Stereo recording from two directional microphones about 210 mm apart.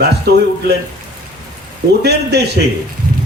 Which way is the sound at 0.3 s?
50° right (ahead or behind).